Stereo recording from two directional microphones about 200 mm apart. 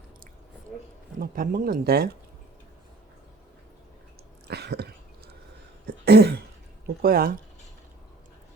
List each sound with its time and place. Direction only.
1.2 s speech: 45° right (ahead or behind)
4.4 s a sound: 55° right (ahead or behind)
6.1 s throat clearing: 55° right (ahead or behind)
6.8 s speech: 50° right (ahead or behind)